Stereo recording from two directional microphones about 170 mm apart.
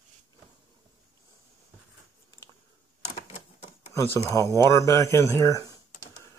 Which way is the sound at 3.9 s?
15° left (ahead or behind).